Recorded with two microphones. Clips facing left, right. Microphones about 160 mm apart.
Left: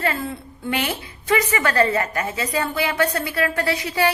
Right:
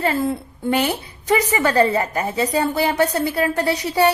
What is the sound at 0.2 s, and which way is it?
A woman's voice, 40° right (ahead or behind).